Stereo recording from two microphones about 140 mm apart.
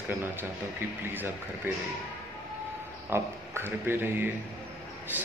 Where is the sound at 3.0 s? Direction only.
15° right (ahead or behind).